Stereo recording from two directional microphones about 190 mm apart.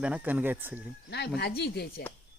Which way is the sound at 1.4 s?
60° left (ahead or behind).